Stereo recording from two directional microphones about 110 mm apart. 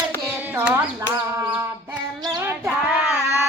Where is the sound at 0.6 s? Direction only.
20° right (ahead or behind).